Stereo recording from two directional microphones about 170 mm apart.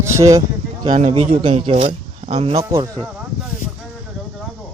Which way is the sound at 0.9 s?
35° right (ahead or behind).